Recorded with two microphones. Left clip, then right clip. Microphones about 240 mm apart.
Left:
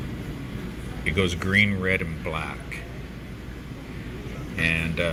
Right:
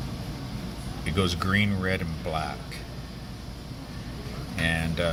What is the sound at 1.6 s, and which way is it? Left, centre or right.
Speech, centre.